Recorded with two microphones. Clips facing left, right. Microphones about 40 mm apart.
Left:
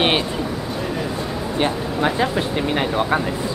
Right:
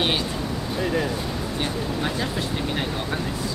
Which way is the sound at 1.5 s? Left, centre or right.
Left.